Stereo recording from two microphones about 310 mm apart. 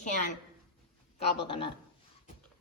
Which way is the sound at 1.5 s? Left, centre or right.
Centre.